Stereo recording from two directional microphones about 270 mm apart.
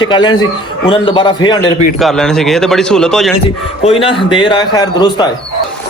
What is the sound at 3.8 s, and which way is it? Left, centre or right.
A man's voice, centre.